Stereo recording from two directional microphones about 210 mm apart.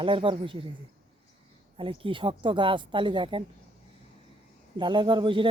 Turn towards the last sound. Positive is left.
turn(degrees=-25)  # may be behind; listen again after turning